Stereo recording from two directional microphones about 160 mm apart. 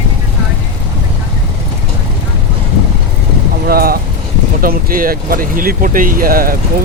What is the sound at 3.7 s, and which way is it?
Speech, 70° right (ahead or behind).